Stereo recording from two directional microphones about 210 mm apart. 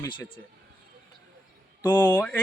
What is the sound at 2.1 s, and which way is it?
Speech, 5° left (ahead or behind).